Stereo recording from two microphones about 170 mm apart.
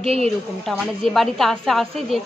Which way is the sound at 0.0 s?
35° right (ahead or behind).